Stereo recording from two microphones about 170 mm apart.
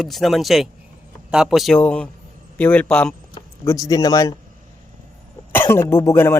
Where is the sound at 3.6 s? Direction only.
20° left (ahead or behind).